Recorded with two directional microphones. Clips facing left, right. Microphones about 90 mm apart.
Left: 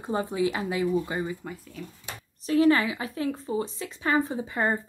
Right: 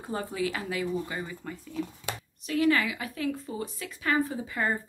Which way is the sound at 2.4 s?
35° left (ahead or behind).